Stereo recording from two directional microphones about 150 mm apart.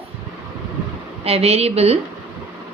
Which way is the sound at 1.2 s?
40° right (ahead or behind).